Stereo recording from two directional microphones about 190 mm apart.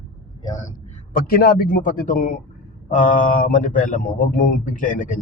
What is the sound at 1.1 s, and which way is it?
Speech, 50° left (ahead or behind).